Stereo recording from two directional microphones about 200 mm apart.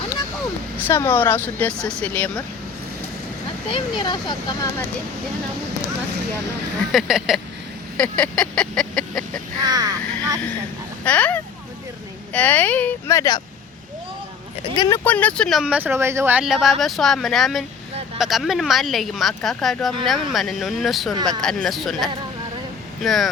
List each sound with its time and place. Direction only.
0.8 s speech: 10° left (ahead or behind)
3.7 s speech: 25° left (ahead or behind)
6.9 s speech: centre (ahead or behind)
9.6 s speech: 20° right (ahead or behind)
11.0 s speech: 5° left (ahead or behind)
14.8 s speech: 15° left (ahead or behind)